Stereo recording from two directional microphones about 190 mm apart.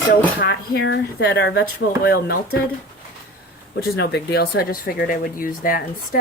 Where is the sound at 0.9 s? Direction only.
65° left (ahead or behind).